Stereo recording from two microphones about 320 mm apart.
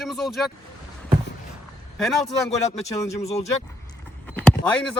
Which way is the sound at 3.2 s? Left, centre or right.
Centre.